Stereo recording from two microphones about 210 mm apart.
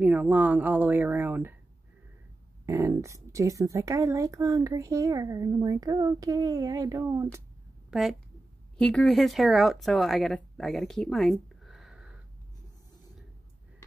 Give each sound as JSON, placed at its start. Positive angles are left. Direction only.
{"t": 0.0, "sound": "speech", "side_deg": -5}
{"t": 2.6, "sound": "speech", "side_deg": -15}
{"t": 7.9, "sound": "speech", "side_deg": 0}